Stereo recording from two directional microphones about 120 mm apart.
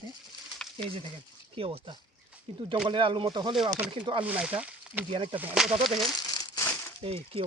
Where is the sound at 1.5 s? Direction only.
50° right (ahead or behind).